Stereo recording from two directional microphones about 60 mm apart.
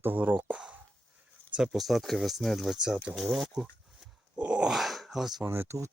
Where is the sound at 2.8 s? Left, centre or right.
Centre.